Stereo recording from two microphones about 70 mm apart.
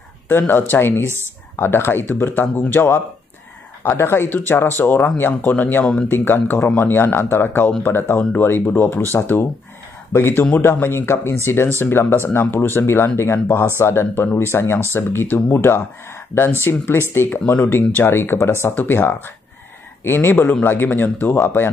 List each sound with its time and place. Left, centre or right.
0.3 s speech: left
1.0 s speech: right
1.6 s speech: left